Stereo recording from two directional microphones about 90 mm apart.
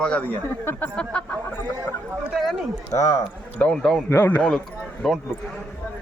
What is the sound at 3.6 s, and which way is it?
Speech, 10° left (ahead or behind).